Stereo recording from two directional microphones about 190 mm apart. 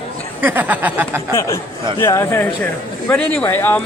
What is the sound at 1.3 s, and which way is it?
Speech, 15° left (ahead or behind).